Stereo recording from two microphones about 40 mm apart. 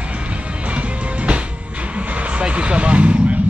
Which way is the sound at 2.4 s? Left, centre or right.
Right.